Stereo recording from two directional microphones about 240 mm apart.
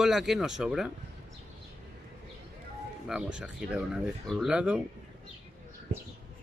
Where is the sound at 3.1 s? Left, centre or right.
Centre.